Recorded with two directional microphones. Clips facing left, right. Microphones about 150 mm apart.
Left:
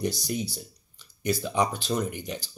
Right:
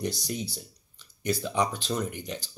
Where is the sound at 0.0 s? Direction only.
10° left (ahead or behind).